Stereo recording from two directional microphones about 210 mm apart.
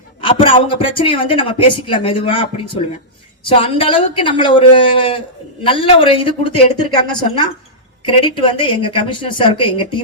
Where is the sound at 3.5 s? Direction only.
25° left (ahead or behind).